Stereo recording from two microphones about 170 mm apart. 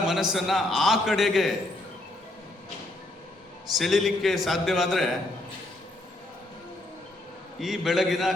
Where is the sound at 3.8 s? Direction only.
Centre (ahead or behind).